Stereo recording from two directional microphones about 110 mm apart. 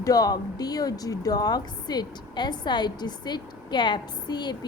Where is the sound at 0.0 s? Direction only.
35° left (ahead or behind).